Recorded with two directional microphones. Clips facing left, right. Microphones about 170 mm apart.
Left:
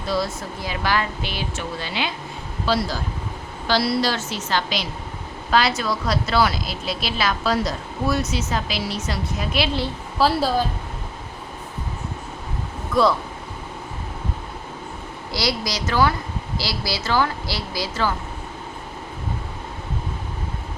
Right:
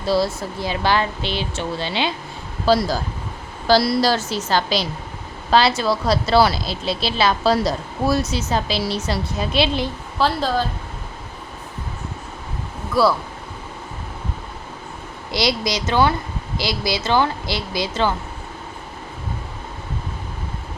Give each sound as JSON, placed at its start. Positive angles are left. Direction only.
{"t": 0.0, "sound": "speech", "side_deg": -30}
{"t": 2.6, "sound": "speech", "side_deg": -40}
{"t": 10.2, "sound": "a woman's voice", "side_deg": 5}
{"t": 12.9, "sound": "speech", "side_deg": -5}
{"t": 15.3, "sound": "speech", "side_deg": -20}